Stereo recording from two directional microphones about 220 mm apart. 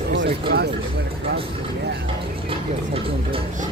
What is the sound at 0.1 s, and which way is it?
Speech, 50° right (ahead or behind).